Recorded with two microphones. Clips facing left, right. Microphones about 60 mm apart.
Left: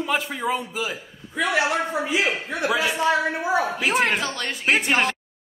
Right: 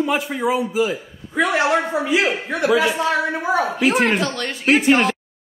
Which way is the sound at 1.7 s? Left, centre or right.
Right.